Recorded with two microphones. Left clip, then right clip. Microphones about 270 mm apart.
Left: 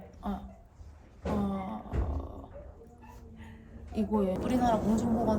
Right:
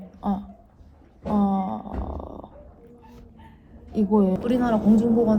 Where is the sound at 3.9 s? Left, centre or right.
Right.